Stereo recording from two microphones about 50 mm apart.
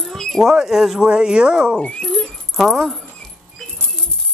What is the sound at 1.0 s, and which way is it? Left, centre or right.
Speech, centre.